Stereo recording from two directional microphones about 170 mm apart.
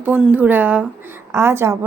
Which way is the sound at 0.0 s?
10° right (ahead or behind).